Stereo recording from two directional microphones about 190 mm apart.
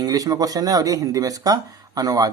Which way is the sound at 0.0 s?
20° right (ahead or behind).